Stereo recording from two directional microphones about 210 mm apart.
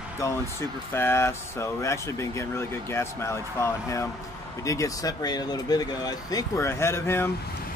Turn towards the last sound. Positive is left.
turn(degrees=10)  # may be behind; listen again after turning